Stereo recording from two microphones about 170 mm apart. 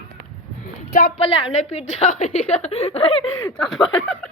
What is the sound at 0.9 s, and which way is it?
Speech, 60° left (ahead or behind).